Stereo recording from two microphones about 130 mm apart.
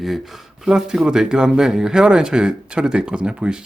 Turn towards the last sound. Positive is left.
turn(degrees=-5)  # may be behind; listen again after turning